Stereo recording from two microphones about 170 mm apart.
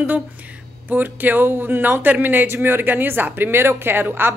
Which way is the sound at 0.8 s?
10° right (ahead or behind).